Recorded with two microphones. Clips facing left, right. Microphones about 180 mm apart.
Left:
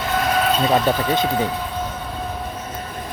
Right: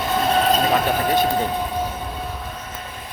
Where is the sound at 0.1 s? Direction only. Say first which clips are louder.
Right 1 dB; 30° right (ahead or behind).